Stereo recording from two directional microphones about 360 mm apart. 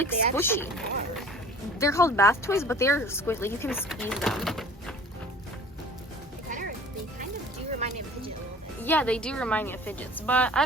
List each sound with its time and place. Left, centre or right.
0.0 s a woman's voice: centre
6.5 s music: right
8.8 s a woman's voice: centre